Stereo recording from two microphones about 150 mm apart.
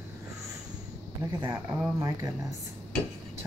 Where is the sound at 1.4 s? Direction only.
25° right (ahead or behind).